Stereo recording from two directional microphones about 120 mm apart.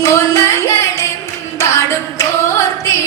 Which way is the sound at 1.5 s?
25° left (ahead or behind).